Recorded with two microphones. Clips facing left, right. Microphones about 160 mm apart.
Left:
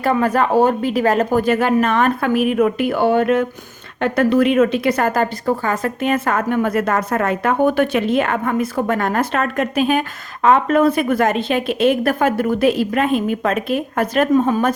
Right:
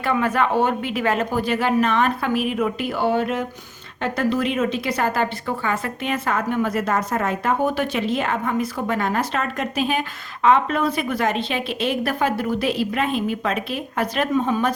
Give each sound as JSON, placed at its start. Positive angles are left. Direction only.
{"t": 0.0, "sound": "a woman's voice", "side_deg": 40}